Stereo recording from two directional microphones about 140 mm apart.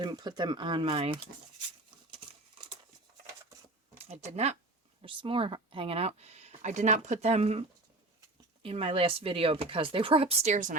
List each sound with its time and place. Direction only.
0.0 s speech: 30° right (ahead or behind)
3.9 s speech: 50° right (ahead or behind)
5.0 s speech: 40° right (ahead or behind)
8.6 s speech: 40° right (ahead or behind); by 10.8 s 60° right (ahead or behind)